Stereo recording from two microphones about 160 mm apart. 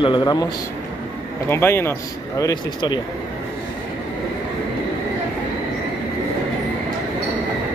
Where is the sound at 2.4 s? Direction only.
25° left (ahead or behind).